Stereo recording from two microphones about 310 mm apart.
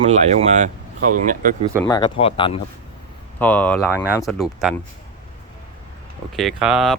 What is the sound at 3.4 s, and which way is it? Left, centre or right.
Speech, centre.